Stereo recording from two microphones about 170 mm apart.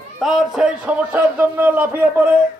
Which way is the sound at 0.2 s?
Centre (ahead or behind).